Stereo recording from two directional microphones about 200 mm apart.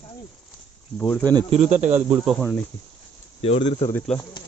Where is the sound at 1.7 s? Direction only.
35° right (ahead or behind).